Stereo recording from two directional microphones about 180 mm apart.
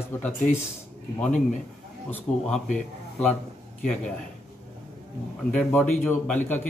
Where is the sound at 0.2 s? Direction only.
15° left (ahead or behind).